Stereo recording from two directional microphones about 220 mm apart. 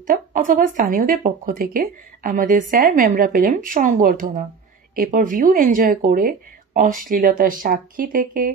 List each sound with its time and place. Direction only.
0.0 s speech: 35° right (ahead or behind)